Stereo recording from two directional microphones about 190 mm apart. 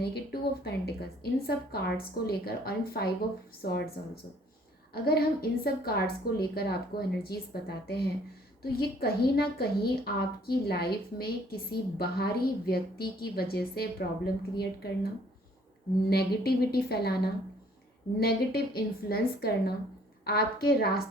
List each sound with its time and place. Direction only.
0.1 s a woman's voice: 60° left (ahead or behind)
16.0 s a woman's voice: 55° left (ahead or behind)